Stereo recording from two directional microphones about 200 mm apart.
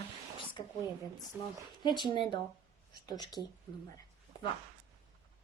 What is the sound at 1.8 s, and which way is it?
A woman's voice, 20° left (ahead or behind).